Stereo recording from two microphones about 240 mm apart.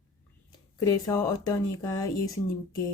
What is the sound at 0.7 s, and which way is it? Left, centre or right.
Speech, centre.